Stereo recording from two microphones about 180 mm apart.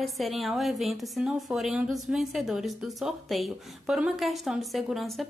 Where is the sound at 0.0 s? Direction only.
Centre (ahead or behind).